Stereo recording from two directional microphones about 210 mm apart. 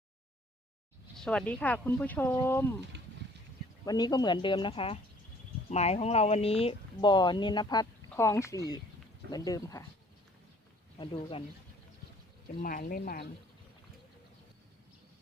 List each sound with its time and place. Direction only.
1.1 s speech: 5° left (ahead or behind)
2.9 s a sound: 55° right (ahead or behind)
3.8 s speech: 20° left (ahead or behind)
10.9 s speech: 25° left (ahead or behind)
12.6 s speech: 40° left (ahead or behind)